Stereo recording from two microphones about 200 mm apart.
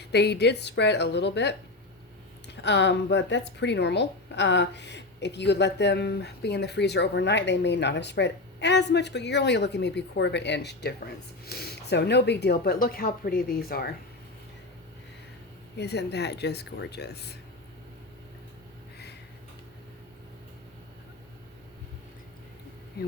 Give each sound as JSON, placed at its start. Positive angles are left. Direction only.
{"t": 0.1, "sound": "a woman's voice", "side_deg": 55}
{"t": 2.6, "sound": "a woman's voice", "side_deg": 60}
{"t": 15.8, "sound": "a woman's voice", "side_deg": 55}